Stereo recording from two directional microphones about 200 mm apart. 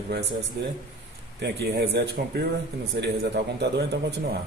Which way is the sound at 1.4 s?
55° right (ahead or behind).